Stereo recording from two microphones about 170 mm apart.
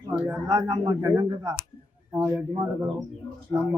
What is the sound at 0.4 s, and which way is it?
A man's voice, 20° right (ahead or behind).